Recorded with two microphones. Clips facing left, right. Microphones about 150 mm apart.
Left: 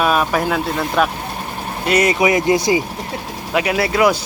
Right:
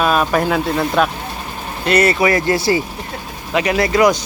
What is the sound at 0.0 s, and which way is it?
Speech, 5° left (ahead or behind).